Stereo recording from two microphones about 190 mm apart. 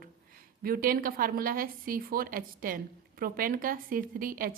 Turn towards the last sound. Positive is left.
turn(degrees=-45)  # may be behind; listen again after turning